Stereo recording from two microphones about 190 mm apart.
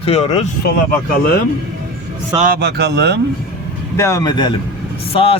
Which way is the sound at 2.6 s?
60° right (ahead or behind).